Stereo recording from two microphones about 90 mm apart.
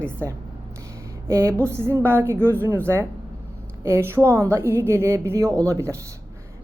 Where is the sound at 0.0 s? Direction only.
25° right (ahead or behind).